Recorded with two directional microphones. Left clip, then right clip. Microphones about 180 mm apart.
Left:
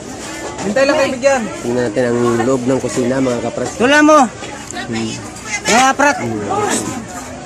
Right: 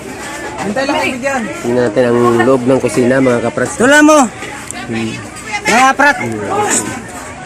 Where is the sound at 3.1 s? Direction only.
20° right (ahead or behind).